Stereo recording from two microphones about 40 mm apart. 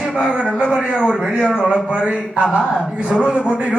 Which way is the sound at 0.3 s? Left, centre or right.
Right.